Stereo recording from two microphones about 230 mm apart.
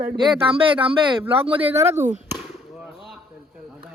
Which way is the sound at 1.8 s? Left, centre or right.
Centre.